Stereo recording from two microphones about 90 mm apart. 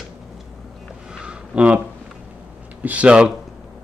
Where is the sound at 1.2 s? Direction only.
15° right (ahead or behind).